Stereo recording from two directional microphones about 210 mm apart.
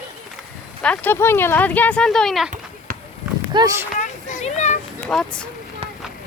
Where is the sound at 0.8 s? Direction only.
5° left (ahead or behind).